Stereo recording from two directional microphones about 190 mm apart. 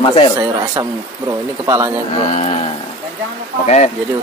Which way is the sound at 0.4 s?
15° right (ahead or behind).